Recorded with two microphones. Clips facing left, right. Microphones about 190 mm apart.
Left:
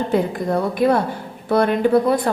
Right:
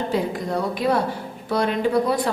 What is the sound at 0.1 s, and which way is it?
A woman's voice, 55° left (ahead or behind).